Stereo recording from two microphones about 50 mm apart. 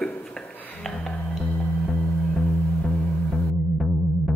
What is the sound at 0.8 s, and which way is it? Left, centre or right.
Music, centre.